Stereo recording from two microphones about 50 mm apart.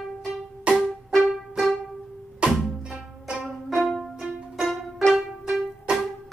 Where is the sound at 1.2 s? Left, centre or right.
Centre.